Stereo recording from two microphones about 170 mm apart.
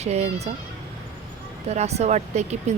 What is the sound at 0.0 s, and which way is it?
Speech, 40° right (ahead or behind).